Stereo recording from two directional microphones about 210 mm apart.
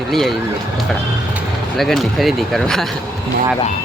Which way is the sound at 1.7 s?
Centre (ahead or behind).